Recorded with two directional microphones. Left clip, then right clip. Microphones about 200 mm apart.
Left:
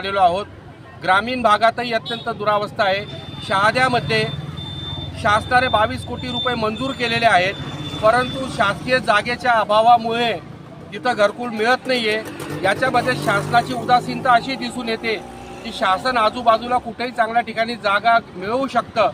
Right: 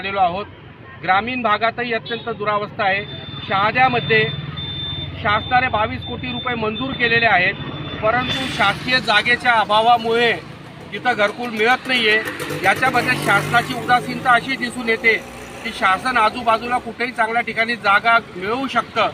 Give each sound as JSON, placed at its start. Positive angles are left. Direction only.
{"t": 0.0, "sound": "speech", "side_deg": 30}
{"t": 5.2, "sound": "speech", "side_deg": 30}
{"t": 9.6, "sound": "speech", "side_deg": 25}